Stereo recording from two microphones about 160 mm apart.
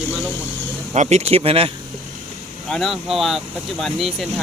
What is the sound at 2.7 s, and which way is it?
Speech, centre (ahead or behind).